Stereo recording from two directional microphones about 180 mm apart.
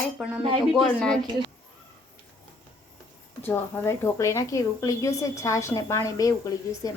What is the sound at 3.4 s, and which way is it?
A woman's voice, 10° left (ahead or behind).